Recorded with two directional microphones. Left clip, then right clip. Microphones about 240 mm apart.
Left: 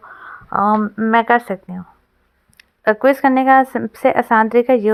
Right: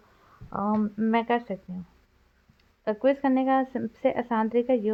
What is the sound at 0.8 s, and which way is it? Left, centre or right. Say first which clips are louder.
Speech: left 11 dB; left.